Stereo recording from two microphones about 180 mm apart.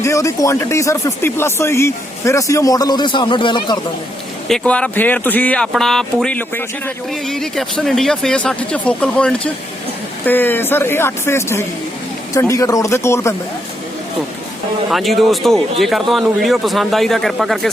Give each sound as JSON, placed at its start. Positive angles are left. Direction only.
{"t": 0.0, "sound": "speech", "side_deg": 15}
{"t": 4.4, "sound": "speech", "side_deg": 5}
{"t": 14.8, "sound": "speech", "side_deg": 0}